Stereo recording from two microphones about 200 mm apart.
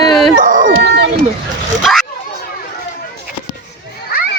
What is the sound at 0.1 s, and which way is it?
Dog, centre (ahead or behind).